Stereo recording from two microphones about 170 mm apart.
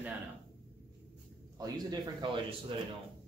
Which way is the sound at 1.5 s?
25° right (ahead or behind).